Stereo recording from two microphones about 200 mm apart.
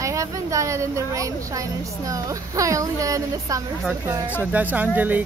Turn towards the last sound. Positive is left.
turn(degrees=-10)  # may be behind; listen again after turning